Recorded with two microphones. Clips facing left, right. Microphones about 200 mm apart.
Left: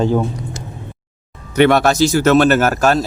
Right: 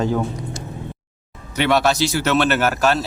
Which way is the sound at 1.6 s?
50° left (ahead or behind).